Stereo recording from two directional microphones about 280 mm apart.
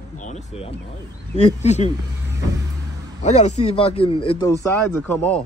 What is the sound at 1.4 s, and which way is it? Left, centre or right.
Speech, left.